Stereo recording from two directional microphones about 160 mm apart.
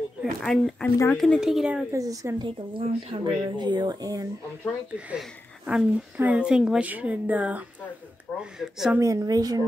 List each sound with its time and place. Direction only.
0.2 s speech: centre (ahead or behind)
1.9 s speech: 20° right (ahead or behind)
4.9 s a woman's voice: 5° right (ahead or behind)
9.0 s speech: 20° right (ahead or behind)